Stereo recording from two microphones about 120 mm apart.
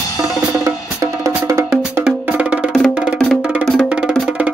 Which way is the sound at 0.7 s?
25° right (ahead or behind).